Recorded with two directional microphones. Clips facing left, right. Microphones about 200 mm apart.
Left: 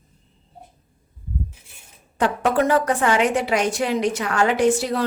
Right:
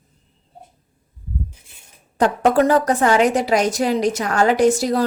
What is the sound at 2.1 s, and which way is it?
Speech, 40° right (ahead or behind).